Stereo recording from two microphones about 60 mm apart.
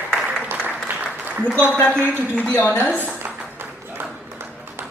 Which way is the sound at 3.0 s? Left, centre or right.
Right.